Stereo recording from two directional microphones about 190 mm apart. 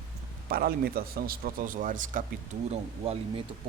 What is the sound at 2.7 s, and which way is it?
Speech, 35° right (ahead or behind).